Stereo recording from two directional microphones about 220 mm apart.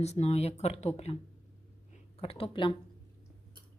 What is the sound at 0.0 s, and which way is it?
Speech, 30° left (ahead or behind).